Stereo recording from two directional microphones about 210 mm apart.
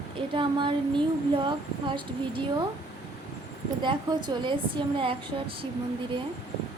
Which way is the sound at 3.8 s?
20° right (ahead or behind).